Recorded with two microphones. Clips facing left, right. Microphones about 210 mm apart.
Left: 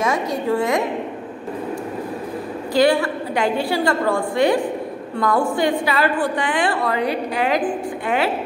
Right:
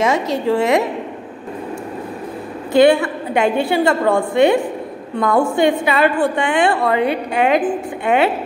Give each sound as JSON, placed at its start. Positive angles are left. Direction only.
{"t": 0.6, "sound": "a woman's voice", "side_deg": -75}
{"t": 2.7, "sound": "a woman's voice", "side_deg": -25}